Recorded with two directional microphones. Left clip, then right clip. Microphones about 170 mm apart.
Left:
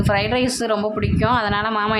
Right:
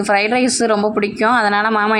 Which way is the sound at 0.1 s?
25° right (ahead or behind).